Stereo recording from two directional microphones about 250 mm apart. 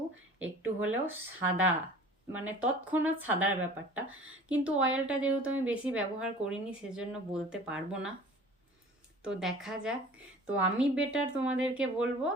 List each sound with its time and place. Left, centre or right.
0.6 s speech: centre
9.2 s speech: centre